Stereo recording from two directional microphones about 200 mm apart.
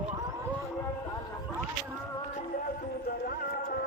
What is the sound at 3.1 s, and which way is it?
Music, 50° left (ahead or behind).